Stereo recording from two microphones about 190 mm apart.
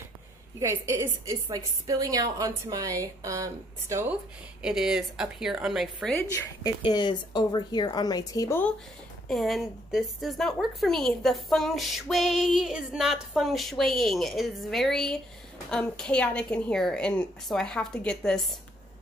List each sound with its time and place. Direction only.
0.6 s a woman's voice: 15° right (ahead or behind)
6.1 s a woman's voice: 15° left (ahead or behind)
9.3 s a woman's voice: centre (ahead or behind)